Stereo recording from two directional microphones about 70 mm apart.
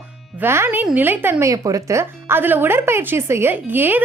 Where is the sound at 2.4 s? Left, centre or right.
Right.